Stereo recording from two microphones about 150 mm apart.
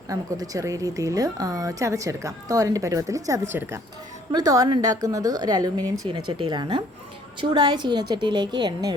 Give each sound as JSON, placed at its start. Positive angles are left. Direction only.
{"t": 0.1, "sound": "a woman's voice", "side_deg": -25}